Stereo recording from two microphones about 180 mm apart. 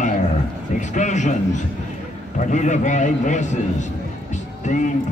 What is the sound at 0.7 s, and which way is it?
A man's voice, 40° left (ahead or behind).